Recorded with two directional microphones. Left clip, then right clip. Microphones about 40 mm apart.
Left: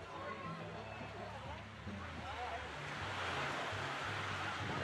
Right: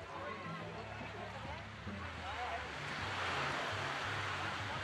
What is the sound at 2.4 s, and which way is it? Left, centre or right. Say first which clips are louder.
Music: right 2 dB; right.